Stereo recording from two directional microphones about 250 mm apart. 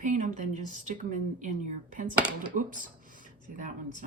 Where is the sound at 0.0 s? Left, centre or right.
Right.